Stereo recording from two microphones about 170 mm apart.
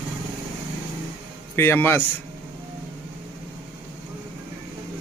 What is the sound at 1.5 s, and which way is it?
Speech, 15° left (ahead or behind).